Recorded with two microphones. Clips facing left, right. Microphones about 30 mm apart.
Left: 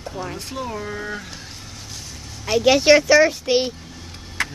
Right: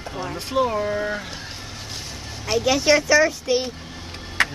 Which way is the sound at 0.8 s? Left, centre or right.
Centre.